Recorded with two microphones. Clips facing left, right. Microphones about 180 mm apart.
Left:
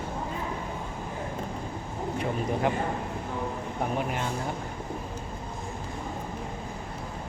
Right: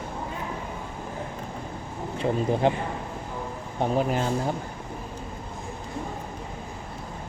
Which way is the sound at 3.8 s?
35° right (ahead or behind).